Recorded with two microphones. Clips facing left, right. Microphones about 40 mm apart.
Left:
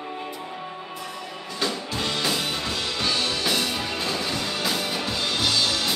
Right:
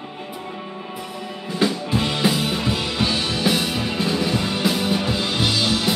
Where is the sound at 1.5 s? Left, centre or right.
Centre.